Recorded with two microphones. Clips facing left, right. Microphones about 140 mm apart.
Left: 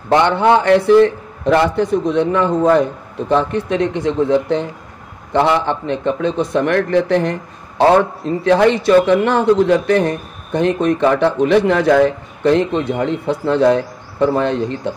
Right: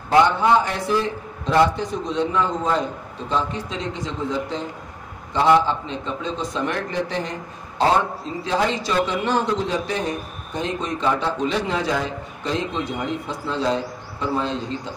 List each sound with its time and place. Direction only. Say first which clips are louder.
0.1 s a man's voice: left 4 dB; 65° left (ahead or behind)